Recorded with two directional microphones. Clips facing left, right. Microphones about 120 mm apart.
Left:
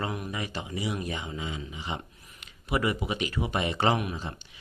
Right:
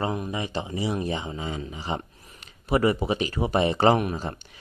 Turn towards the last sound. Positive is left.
turn(degrees=-45)  # may be behind; listen again after turning